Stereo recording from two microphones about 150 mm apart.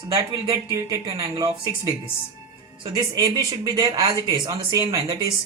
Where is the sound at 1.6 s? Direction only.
15° left (ahead or behind).